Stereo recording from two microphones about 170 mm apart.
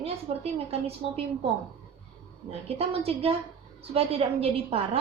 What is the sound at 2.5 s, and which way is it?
Speech, 35° right (ahead or behind).